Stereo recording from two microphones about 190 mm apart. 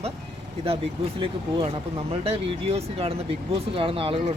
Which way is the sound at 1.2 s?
30° right (ahead or behind).